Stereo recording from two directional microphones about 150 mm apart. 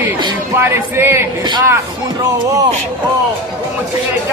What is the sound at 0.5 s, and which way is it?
Music, 15° right (ahead or behind).